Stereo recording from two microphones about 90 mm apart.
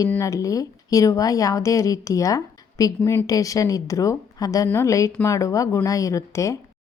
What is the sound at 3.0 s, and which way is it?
Speech, 25° left (ahead or behind).